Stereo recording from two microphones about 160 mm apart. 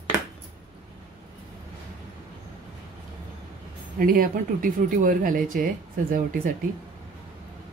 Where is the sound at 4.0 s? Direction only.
65° right (ahead or behind).